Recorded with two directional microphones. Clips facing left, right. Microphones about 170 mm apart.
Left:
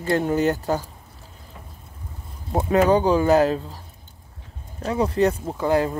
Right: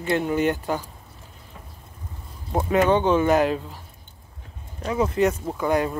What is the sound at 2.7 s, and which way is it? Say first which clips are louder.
Speech: left 2 dB; 35° left (ahead or behind).